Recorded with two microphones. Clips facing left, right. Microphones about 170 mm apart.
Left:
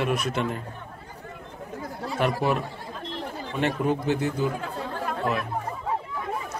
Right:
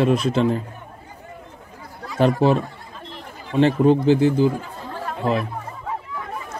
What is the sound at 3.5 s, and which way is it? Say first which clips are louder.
Speech: right 9 dB; 30° right (ahead or behind).